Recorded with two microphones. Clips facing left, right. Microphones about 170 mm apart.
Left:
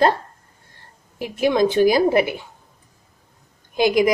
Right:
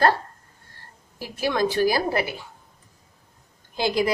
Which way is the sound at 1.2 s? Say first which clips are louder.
Left 6 dB; 20° left (ahead or behind).